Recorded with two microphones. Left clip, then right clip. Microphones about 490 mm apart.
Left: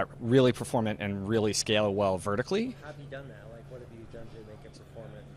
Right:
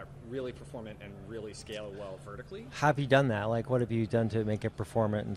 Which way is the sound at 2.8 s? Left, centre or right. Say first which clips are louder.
Right 18 dB; right.